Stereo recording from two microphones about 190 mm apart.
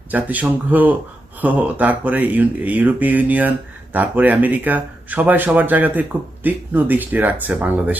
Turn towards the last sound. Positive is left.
turn(degrees=-10)  # may be behind; listen again after turning